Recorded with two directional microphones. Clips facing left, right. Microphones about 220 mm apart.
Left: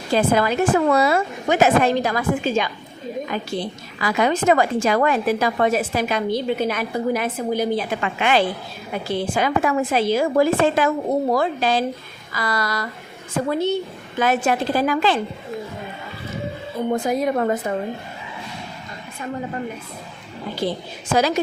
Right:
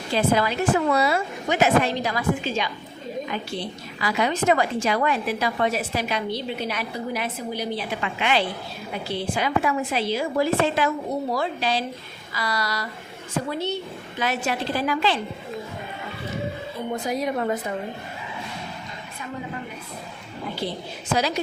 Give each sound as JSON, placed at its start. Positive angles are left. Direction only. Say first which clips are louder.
{"t": 0.1, "sound": "a woman's voice", "louder": "left 4 dB", "side_deg": 50}
{"t": 4.0, "sound": "a woman's voice", "louder": "left 4 dB", "side_deg": 50}
{"t": 16.9, "sound": "a woman's voice", "louder": "left 5 dB", "side_deg": 50}
{"t": 21.2, "sound": "a woman's voice", "louder": "left 6 dB", "side_deg": 50}